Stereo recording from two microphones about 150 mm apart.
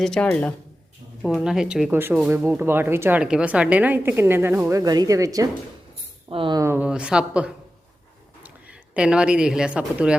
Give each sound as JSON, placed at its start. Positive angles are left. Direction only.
{"t": 0.0, "sound": "speech", "side_deg": 5}
{"t": 6.6, "sound": "speech", "side_deg": -15}